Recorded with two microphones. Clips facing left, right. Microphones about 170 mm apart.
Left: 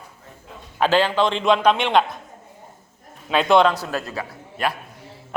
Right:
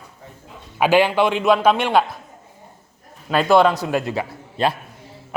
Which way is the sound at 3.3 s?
5° right (ahead or behind).